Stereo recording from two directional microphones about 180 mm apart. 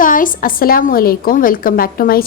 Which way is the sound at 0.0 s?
50° left (ahead or behind).